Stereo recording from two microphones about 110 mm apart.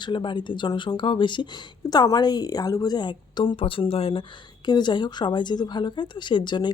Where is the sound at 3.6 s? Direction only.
55° left (ahead or behind).